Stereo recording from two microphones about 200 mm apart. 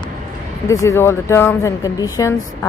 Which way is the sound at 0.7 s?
15° left (ahead or behind).